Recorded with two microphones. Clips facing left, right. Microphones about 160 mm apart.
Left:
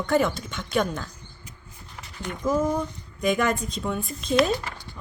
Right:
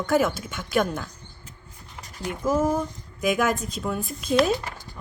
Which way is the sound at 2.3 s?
5° right (ahead or behind).